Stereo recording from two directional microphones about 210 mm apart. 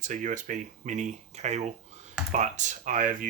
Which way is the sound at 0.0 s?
35° right (ahead or behind).